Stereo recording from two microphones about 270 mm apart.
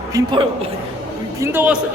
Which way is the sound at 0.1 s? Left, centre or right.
Centre.